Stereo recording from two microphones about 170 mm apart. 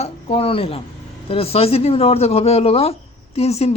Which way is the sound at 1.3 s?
35° left (ahead or behind).